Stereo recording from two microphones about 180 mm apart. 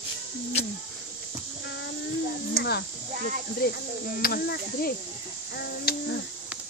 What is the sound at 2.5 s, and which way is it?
Speech, 65° left (ahead or behind).